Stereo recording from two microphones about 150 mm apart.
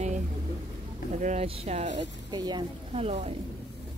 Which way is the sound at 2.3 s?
30° right (ahead or behind).